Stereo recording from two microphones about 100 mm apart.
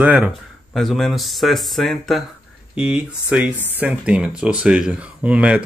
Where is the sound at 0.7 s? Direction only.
Centre (ahead or behind).